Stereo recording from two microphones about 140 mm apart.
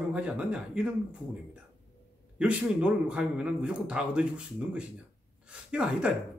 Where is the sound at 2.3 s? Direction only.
10° right (ahead or behind).